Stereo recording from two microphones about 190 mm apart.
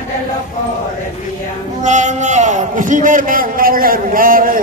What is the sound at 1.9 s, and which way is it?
A man's voice, 40° right (ahead or behind).